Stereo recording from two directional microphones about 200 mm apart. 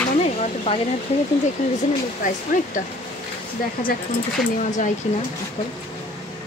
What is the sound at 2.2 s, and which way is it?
Speech, 40° left (ahead or behind).